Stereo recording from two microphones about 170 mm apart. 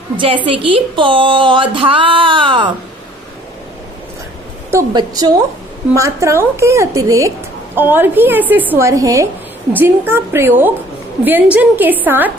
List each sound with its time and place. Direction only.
0.5 s speech: 30° right (ahead or behind)
4.7 s a woman's voice: 25° right (ahead or behind)